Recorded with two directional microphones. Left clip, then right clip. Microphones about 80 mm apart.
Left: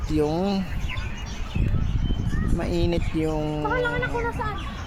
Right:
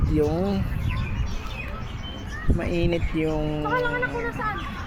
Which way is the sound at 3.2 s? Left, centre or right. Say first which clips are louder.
Even; left.